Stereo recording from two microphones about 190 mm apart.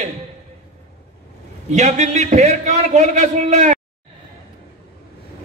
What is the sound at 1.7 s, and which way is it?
A man's voice, 35° right (ahead or behind).